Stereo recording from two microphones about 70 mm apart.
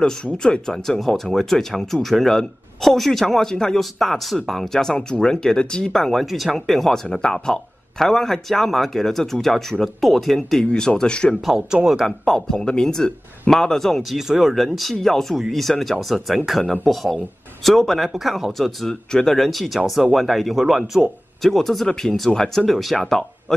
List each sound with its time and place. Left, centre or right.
0.0 s speech: centre
10.6 s speech: centre
11.4 s speech: centre
12.0 s speech: centre